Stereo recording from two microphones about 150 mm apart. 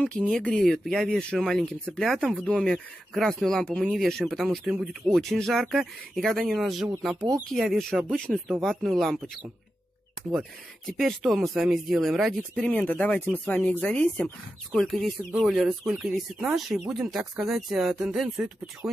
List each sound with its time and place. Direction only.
0.3 s speech: 5° left (ahead or behind)
10.9 s speech: centre (ahead or behind)